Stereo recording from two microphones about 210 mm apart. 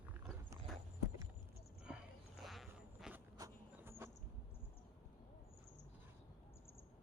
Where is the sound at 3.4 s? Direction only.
10° right (ahead or behind).